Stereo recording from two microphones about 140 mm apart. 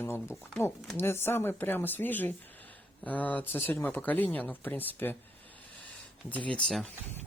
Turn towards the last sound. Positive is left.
turn(degrees=5)  # may be behind; listen again after turning